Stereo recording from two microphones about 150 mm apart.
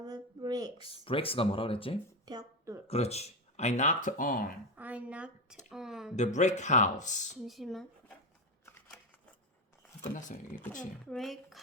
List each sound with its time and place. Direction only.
0.0 s a sound: 25° right (ahead or behind)
0.8 s speech: 40° left (ahead or behind)
2.2 s a sound: 25° right (ahead or behind)
2.8 s speech: 45° left (ahead or behind); by 4.5 s 70° left (ahead or behind)
4.8 s a sound: 10° right (ahead or behind)
6.1 s speech: 50° left (ahead or behind)
7.4 s speech: centre (ahead or behind)
10.0 s speech: 55° left (ahead or behind)
11.0 s speech: centre (ahead or behind)